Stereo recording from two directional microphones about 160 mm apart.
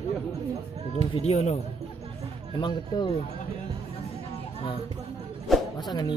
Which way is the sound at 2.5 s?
30° left (ahead or behind).